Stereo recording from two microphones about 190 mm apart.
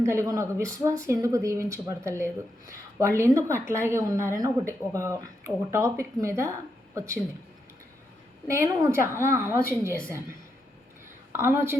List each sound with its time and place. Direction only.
0.0 s speech: 15° right (ahead or behind)
8.4 s speech: 15° right (ahead or behind)
11.3 s speech: 15° right (ahead or behind)